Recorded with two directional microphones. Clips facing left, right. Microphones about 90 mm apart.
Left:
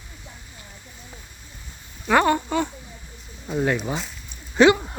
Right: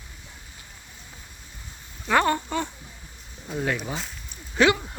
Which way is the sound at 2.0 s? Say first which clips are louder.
Left 3 dB; 10° left (ahead or behind).